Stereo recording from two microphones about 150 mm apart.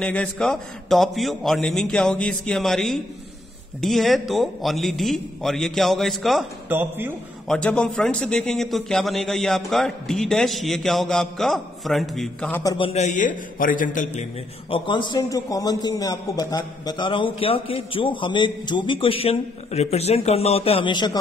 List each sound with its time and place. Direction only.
0.0 s a man's voice: 10° left (ahead or behind)
6.7 s speech: 15° right (ahead or behind)
7.4 s a man's voice: 5° left (ahead or behind)
12.6 s a man's voice: 35° left (ahead or behind); by 14.2 s 60° left (ahead or behind)
14.7 s a man's voice: 30° left (ahead or behind)